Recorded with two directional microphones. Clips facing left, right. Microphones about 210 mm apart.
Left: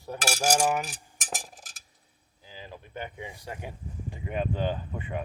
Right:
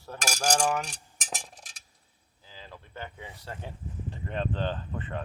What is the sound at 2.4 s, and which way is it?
Speech, 15° left (ahead or behind).